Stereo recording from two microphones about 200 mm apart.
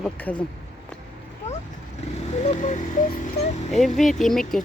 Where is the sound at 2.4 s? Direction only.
35° left (ahead or behind).